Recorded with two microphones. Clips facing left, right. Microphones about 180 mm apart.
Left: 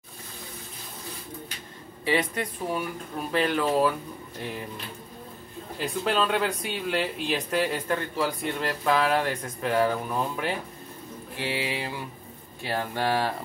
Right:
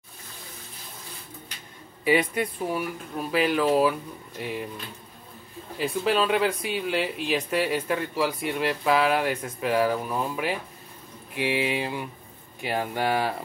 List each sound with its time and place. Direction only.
2.0 s speech: 10° right (ahead or behind)
5.8 s speech: 5° right (ahead or behind)
11.3 s a sound: 20° right (ahead or behind)
12.6 s speech: 15° right (ahead or behind)